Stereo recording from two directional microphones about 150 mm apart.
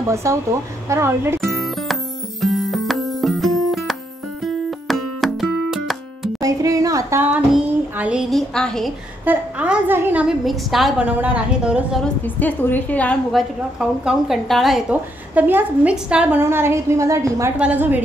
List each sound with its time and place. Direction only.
0.1 s a woman's voice: 20° right (ahead or behind)
1.4 s music: centre (ahead or behind)
6.4 s a sound: 20° right (ahead or behind); by 8.9 s 5° left (ahead or behind)
9.2 s a woman's voice: 10° right (ahead or behind)
12.0 s a woman's voice: 10° left (ahead or behind); by 18.0 s 10° right (ahead or behind)